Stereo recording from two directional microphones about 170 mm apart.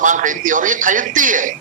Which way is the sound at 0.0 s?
50° right (ahead or behind).